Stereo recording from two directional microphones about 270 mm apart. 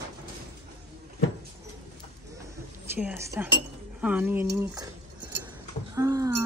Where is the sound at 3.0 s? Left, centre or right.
Centre.